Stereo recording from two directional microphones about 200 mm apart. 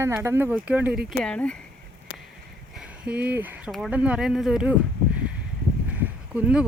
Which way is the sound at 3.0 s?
5° right (ahead or behind).